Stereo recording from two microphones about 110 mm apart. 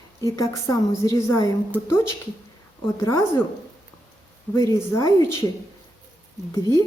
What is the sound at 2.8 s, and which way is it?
Speech, 25° left (ahead or behind).